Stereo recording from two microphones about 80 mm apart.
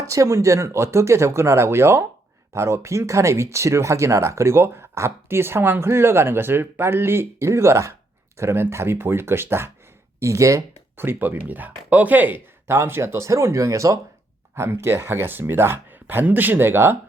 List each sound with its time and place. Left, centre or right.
0.1 s speech: right
10.9 s speech: right